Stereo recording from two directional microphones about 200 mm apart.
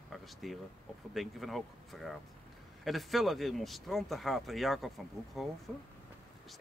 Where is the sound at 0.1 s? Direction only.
Centre (ahead or behind).